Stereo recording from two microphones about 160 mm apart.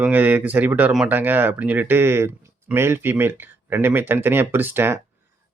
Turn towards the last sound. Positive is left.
turn(degrees=-15)  # may be behind; listen again after turning